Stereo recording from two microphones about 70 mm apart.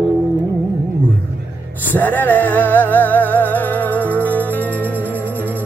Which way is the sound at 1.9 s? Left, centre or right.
Left.